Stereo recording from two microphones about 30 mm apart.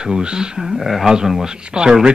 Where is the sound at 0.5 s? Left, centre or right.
Centre.